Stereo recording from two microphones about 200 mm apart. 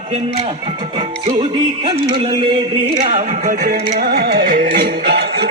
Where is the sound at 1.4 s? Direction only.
25° right (ahead or behind).